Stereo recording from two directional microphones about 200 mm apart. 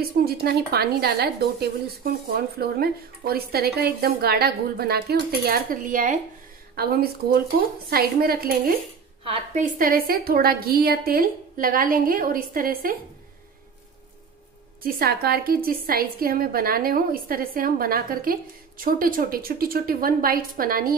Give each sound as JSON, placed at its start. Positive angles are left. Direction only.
{"t": 0.2, "sound": "a woman's voice", "side_deg": -50}
{"t": 9.2, "sound": "a woman's voice", "side_deg": -30}
{"t": 14.8, "sound": "a woman's voice", "side_deg": -50}